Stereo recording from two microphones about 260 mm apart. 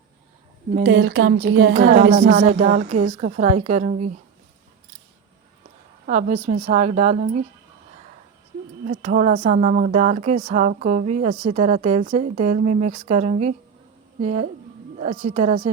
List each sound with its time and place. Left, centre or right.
0.8 s a woman's voice: right
1.7 s speech: right
6.1 s speech: right
8.9 s speech: right